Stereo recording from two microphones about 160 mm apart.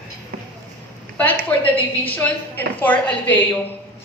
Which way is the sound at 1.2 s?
10° left (ahead or behind).